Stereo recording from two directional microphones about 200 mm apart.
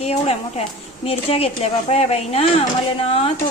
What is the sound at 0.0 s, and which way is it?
A woman's voice, 30° left (ahead or behind).